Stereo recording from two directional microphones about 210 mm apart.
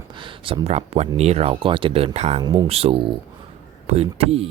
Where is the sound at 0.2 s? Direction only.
25° right (ahead or behind).